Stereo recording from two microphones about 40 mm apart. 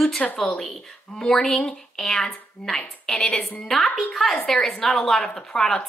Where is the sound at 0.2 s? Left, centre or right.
Centre.